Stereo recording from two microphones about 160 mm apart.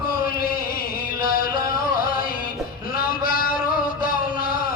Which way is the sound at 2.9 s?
65° left (ahead or behind).